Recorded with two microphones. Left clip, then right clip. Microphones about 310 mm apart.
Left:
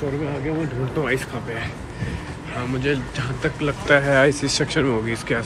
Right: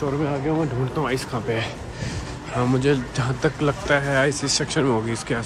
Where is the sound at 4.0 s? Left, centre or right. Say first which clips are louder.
Left 4 dB; centre.